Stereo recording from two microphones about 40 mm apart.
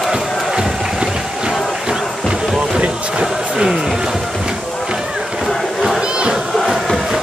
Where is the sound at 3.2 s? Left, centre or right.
Centre.